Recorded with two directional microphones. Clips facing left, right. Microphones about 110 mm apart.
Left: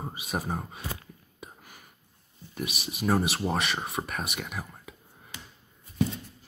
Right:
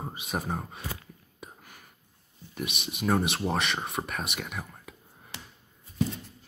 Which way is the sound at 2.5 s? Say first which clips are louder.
Even; centre (ahead or behind).